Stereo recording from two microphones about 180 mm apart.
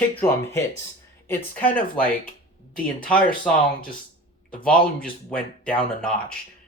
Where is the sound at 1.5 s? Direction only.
10° left (ahead or behind).